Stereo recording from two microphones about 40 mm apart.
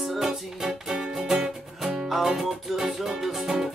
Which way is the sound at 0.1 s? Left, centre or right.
Centre.